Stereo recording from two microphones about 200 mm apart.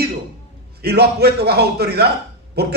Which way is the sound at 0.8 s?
55° right (ahead or behind).